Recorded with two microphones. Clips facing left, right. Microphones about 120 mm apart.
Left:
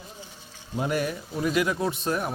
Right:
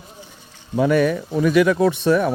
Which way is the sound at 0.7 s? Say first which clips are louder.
Right 10 dB; 80° right.